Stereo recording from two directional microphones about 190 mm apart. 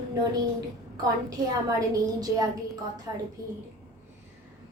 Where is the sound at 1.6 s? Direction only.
20° right (ahead or behind).